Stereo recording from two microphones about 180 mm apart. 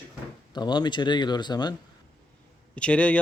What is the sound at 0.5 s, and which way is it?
Speech, 25° left (ahead or behind).